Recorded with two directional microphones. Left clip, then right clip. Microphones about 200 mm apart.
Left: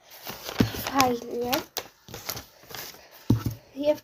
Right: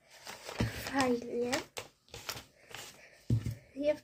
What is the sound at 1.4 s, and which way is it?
Typewriter, 15° left (ahead or behind).